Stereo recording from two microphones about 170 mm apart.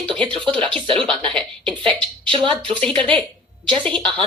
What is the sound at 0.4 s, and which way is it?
A woman's voice, 30° right (ahead or behind).